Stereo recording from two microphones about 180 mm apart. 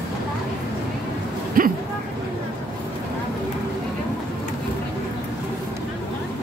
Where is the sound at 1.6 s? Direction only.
55° right (ahead or behind).